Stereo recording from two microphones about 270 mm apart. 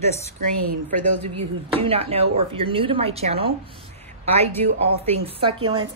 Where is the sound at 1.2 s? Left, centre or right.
Right.